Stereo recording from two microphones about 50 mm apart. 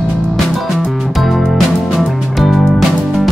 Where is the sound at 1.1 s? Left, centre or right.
Centre.